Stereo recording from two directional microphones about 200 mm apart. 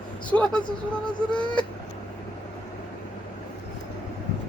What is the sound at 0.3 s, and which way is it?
Speech, 5° left (ahead or behind).